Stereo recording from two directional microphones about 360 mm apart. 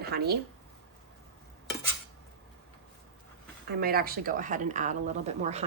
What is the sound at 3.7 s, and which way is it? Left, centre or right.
Speech, right.